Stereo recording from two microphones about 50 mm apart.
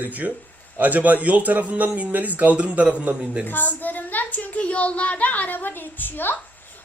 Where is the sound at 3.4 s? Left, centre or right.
Left.